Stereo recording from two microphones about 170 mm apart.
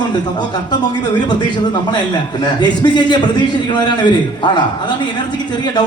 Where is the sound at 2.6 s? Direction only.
25° left (ahead or behind).